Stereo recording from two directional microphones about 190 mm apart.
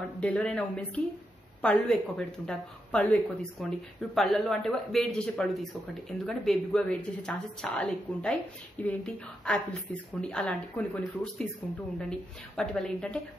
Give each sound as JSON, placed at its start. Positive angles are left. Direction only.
{"t": 0.2, "sound": "a woman's voice", "side_deg": 5}